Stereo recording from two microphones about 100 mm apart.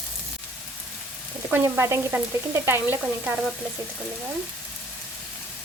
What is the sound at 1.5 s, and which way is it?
Speech, 25° right (ahead or behind).